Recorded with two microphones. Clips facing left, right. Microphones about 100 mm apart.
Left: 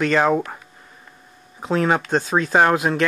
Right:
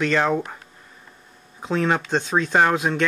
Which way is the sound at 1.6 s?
5° left (ahead or behind).